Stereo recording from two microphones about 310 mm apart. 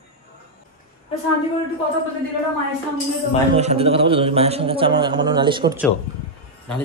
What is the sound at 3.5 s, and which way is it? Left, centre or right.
A man's voice, centre.